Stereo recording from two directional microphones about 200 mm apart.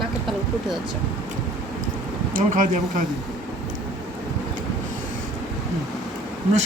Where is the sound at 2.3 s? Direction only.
40° right (ahead or behind).